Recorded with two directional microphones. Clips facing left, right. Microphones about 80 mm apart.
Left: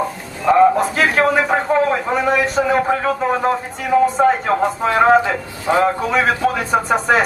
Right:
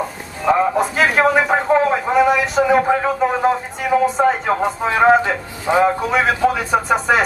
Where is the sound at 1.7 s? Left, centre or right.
Centre.